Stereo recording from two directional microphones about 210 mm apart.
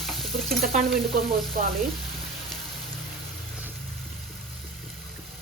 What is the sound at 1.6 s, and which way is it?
Frying, 40° right (ahead or behind).